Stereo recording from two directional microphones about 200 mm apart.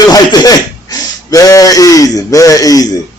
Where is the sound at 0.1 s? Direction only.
20° left (ahead or behind).